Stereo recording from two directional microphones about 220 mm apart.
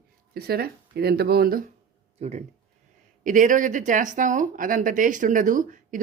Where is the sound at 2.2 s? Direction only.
30° right (ahead or behind).